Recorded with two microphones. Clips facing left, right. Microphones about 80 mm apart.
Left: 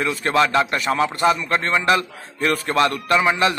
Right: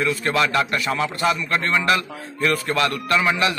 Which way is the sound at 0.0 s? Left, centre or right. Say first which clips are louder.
Left 2 dB; left.